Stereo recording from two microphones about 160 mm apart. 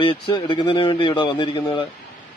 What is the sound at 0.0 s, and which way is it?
A man's voice, 35° left (ahead or behind).